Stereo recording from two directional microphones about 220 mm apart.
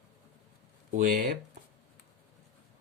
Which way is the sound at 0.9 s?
35° right (ahead or behind).